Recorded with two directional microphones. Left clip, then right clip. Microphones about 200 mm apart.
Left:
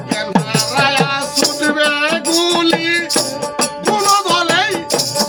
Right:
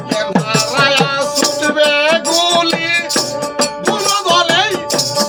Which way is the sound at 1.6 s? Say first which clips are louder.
Right 4 dB; 5° right (ahead or behind).